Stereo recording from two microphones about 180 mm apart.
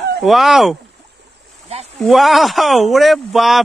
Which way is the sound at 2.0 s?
Centre (ahead or behind).